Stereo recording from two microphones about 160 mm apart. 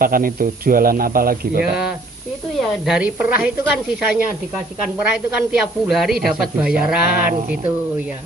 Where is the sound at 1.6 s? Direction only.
5° right (ahead or behind).